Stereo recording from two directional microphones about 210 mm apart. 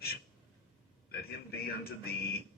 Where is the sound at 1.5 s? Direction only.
45° left (ahead or behind).